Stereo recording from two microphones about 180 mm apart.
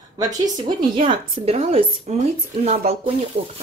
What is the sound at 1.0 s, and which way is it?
Speech, 30° right (ahead or behind).